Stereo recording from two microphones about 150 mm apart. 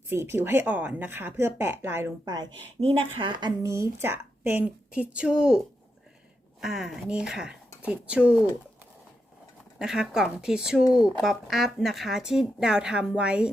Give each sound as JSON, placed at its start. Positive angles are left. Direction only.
{"t": 0.1, "sound": "speech", "side_deg": -15}
{"t": 2.8, "sound": "a woman's voice", "side_deg": -35}
{"t": 3.6, "sound": "a woman's voice", "side_deg": -20}
{"t": 9.7, "sound": "speech", "side_deg": -5}